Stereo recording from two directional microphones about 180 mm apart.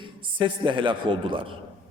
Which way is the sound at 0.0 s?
25° right (ahead or behind).